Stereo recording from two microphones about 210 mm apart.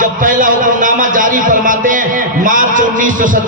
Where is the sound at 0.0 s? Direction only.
40° right (ahead or behind).